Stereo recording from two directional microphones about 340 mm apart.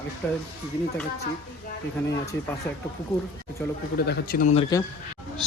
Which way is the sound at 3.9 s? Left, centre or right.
Left.